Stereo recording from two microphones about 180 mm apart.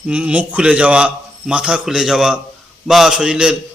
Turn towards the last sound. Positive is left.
turn(degrees=-5)  # may be behind; listen again after turning